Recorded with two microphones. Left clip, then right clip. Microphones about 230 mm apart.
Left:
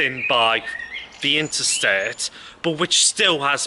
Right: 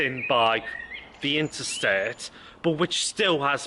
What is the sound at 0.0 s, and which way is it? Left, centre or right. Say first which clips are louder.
Speech: left 4 dB; centre.